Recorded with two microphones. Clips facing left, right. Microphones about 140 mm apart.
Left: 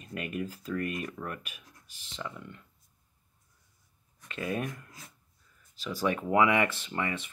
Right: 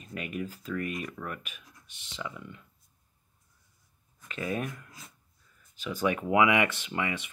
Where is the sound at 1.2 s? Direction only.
15° left (ahead or behind).